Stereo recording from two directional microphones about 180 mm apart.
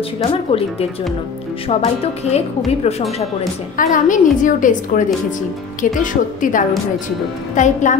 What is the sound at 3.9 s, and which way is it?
A woman's voice, 45° left (ahead or behind).